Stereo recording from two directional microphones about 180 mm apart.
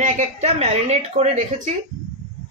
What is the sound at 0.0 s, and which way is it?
Speech, 40° right (ahead or behind).